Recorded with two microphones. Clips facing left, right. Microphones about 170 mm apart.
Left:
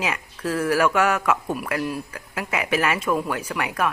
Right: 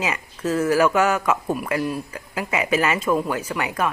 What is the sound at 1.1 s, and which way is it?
Speech, 5° left (ahead or behind).